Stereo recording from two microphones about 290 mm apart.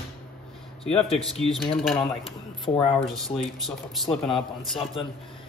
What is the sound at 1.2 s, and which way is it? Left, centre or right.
Speech, centre.